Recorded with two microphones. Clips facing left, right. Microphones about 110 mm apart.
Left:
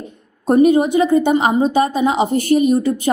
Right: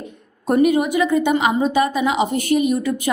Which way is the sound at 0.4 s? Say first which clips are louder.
Left 4 dB; 30° left (ahead or behind).